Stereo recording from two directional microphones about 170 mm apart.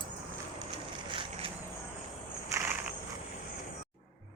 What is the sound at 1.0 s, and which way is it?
Vehicle, 30° right (ahead or behind).